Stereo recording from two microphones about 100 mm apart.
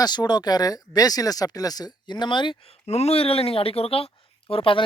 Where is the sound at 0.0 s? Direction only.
45° left (ahead or behind).